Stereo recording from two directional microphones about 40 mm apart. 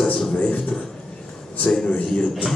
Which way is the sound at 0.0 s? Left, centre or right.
Centre.